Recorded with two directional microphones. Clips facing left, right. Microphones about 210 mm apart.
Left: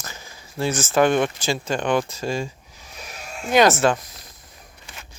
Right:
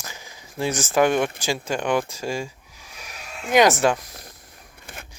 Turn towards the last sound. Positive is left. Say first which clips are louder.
# right 3 dB
turn(degrees=-55)  # may be behind; listen again after turning